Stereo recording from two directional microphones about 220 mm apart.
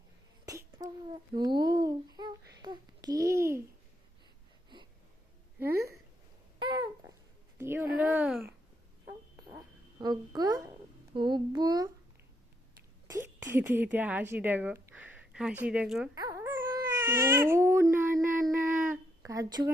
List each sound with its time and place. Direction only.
0.4 s a child's voice: 15° right (ahead or behind)
6.6 s babbling: 20° right (ahead or behind)
7.6 s speech: 10° right (ahead or behind)
10.0 s speech: 20° right (ahead or behind)
13.5 s a woman's voice: 10° right (ahead or behind)
16.1 s baby cry: 15° right (ahead or behind)
18.4 s a sound: 10° right (ahead or behind)